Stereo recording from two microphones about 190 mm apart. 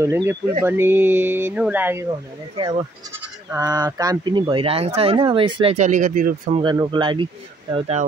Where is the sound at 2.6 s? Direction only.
25° right (ahead or behind).